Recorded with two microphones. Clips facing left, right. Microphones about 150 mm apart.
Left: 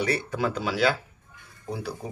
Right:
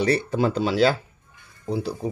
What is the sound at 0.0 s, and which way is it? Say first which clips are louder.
Speech: right 5 dB; 30° right (ahead or behind).